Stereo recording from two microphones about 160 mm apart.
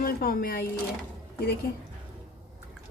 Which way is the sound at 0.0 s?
65° left (ahead or behind).